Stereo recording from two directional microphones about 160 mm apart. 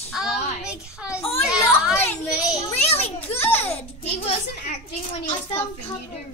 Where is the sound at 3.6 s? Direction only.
40° left (ahead or behind).